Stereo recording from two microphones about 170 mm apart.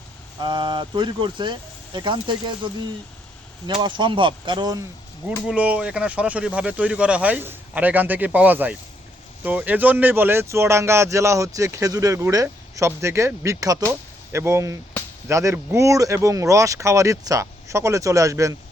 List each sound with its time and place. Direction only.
0.4 s speech: 25° right (ahead or behind)
3.8 s speech: 30° right (ahead or behind)
5.5 s speech: 5° right (ahead or behind)